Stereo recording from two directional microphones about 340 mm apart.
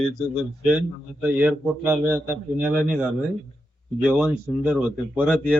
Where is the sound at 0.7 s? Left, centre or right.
Centre.